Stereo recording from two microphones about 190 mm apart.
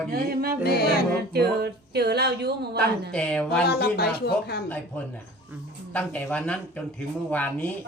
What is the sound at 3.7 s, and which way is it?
Speech, 55° left (ahead or behind).